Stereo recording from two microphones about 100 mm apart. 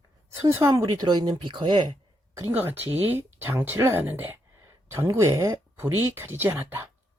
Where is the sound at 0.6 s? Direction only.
30° right (ahead or behind); by 1.9 s 50° right (ahead or behind).